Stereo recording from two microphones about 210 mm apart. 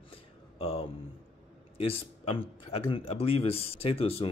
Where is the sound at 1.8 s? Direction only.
25° left (ahead or behind).